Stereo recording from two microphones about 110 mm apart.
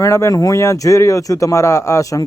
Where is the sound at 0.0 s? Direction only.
25° left (ahead or behind).